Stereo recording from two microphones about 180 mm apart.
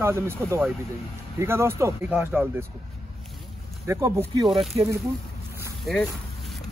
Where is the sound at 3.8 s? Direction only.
15° right (ahead or behind).